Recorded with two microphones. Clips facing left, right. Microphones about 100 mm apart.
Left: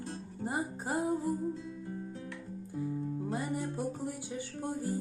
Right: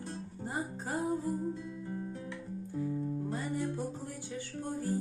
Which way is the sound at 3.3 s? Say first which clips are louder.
Even; 15° left (ahead or behind).